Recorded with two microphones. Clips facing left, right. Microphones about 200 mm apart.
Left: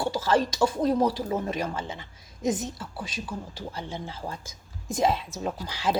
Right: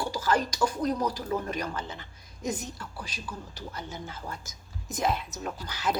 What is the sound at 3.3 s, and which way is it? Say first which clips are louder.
Speech: left 4 dB; 30° left (ahead or behind).